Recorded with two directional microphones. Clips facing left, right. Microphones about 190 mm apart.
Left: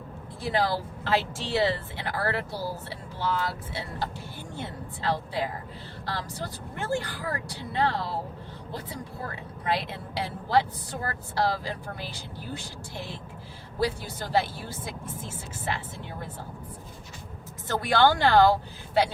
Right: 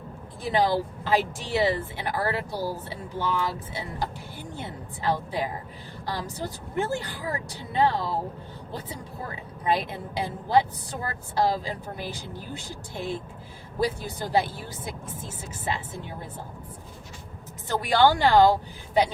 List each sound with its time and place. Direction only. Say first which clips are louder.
0.5 s a woman's voice: right 4 dB; 20° right (ahead or behind)
9.6 s a woman's voice: right 3 dB; 20° right (ahead or behind)
17.7 s speech: right 1 dB; 15° right (ahead or behind)